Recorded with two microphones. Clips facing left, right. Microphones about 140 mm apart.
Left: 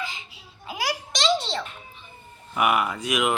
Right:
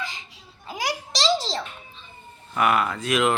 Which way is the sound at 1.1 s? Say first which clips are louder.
Right 1 dB; 35° right (ahead or behind).